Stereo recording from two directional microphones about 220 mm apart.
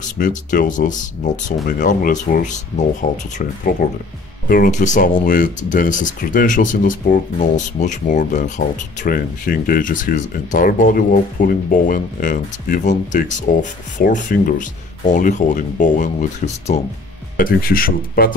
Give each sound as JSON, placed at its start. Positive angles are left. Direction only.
{"t": 0.2, "sound": "speech", "side_deg": 35}
{"t": 4.5, "sound": "speech", "side_deg": 35}